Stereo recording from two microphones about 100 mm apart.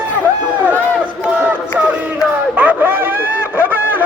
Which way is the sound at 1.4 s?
20° right (ahead or behind).